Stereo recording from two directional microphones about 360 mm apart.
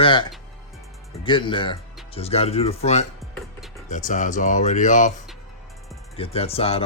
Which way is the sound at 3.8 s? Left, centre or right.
Left.